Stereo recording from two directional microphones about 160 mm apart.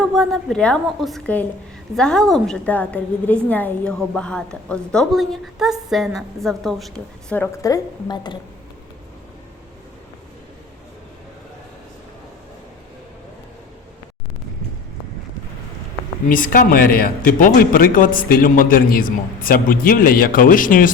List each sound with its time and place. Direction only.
0.0 s a woman's voice: centre (ahead or behind)
7.6 s a woman's voice: 25° left (ahead or behind)
16.3 s a man's voice: 60° left (ahead or behind)